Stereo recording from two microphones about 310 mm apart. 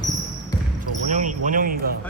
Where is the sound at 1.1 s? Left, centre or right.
Right.